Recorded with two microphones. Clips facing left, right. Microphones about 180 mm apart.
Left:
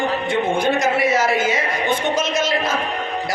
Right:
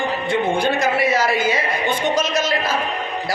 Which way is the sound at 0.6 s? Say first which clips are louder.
Left 1 dB; 25° left (ahead or behind).